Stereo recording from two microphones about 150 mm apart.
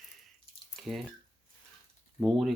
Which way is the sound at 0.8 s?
Centre (ahead or behind).